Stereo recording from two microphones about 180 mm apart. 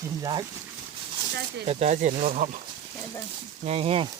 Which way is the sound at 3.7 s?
35° right (ahead or behind).